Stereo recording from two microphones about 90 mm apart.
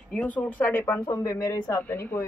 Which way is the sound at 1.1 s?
40° left (ahead or behind).